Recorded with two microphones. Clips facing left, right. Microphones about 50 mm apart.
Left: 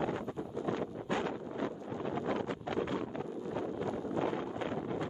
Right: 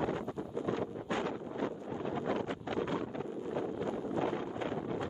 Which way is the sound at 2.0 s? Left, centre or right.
Left.